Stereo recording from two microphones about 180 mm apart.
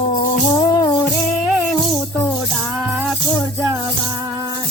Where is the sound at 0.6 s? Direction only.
25° left (ahead or behind).